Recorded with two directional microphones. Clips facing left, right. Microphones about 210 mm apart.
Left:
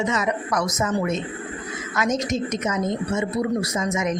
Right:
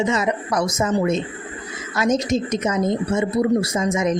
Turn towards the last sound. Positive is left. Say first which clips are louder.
# right 4 dB
turn(degrees=-30)  # may be behind; listen again after turning